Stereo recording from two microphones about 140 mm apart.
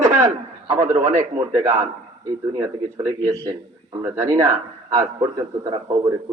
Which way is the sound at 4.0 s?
20° right (ahead or behind).